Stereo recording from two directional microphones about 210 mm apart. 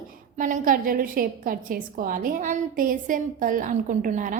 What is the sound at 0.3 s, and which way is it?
A woman's voice, 40° right (ahead or behind).